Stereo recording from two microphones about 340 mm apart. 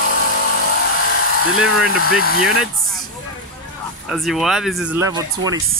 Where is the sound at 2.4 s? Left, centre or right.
Centre.